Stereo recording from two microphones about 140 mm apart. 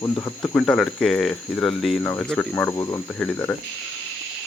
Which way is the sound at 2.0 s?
15° left (ahead or behind).